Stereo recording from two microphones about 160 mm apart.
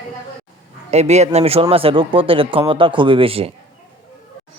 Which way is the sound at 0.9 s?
45° right (ahead or behind).